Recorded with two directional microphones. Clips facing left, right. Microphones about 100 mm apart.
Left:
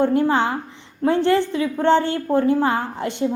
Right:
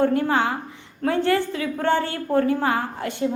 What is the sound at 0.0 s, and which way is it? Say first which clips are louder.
A woman's voice: left 2 dB; 25° left (ahead or behind).